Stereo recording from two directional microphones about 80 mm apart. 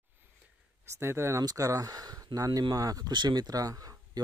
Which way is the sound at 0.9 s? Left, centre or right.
Right.